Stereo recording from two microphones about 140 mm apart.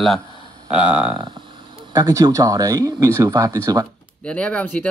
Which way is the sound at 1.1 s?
30° right (ahead or behind).